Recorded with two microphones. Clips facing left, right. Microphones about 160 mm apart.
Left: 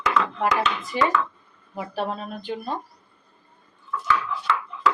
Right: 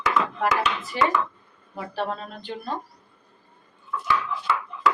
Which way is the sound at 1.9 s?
15° left (ahead or behind).